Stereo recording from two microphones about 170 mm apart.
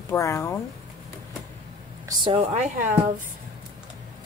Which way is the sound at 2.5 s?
45° right (ahead or behind).